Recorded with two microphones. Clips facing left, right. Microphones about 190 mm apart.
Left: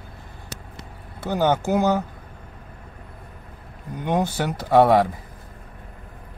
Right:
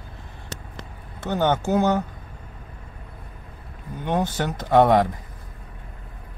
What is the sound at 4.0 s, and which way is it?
Speech, 10° left (ahead or behind).